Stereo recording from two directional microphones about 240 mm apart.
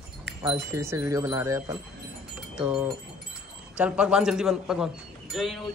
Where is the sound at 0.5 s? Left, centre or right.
Centre.